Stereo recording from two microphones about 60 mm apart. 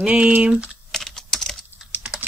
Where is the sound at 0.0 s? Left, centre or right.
Centre.